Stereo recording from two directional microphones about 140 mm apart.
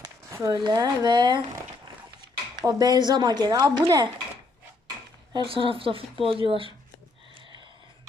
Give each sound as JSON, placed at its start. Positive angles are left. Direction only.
{"t": 0.0, "sound": "a sound", "side_deg": -20}
{"t": 0.6, "sound": "speech", "side_deg": -30}
{"t": 2.6, "sound": "speech", "side_deg": -30}
{"t": 5.3, "sound": "speech", "side_deg": -35}